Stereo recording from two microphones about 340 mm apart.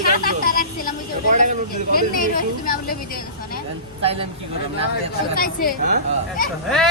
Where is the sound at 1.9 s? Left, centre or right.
Left.